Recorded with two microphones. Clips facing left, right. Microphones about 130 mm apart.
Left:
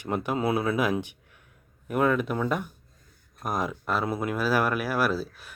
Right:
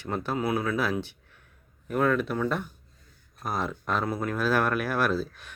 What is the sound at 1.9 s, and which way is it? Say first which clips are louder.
Speech: left 1 dB; 10° left (ahead or behind).